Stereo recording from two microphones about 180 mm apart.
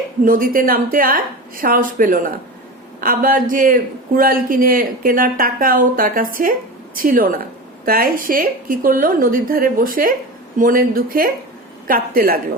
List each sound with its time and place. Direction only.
0.3 s speech: 50° right (ahead or behind)